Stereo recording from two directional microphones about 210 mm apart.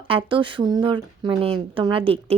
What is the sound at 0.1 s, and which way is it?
Speech, 25° right (ahead or behind).